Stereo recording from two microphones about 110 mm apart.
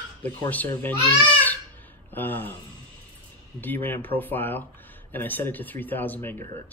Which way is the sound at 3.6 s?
20° left (ahead or behind).